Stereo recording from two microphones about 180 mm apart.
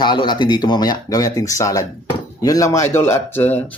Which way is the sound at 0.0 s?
25° left (ahead or behind).